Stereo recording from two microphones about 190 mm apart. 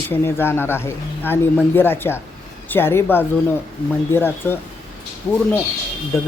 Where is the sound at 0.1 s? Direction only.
10° left (ahead or behind).